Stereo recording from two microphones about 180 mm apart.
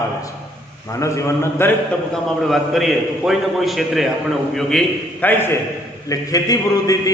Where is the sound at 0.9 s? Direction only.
15° left (ahead or behind).